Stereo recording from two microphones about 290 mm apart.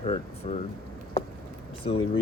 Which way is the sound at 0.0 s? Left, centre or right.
Left.